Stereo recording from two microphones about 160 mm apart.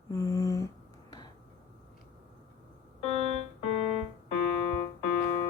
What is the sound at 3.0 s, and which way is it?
Keyboard, 40° left (ahead or behind).